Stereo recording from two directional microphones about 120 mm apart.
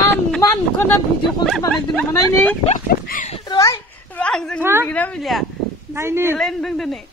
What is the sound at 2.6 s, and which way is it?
Speech, 75° left (ahead or behind).